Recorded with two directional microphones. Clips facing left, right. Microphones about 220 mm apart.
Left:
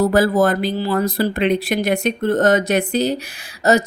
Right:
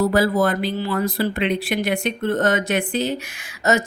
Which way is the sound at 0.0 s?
45° left (ahead or behind).